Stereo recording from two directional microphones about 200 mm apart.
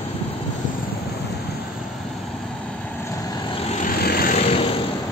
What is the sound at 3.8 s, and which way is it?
Vehicle, 45° left (ahead or behind).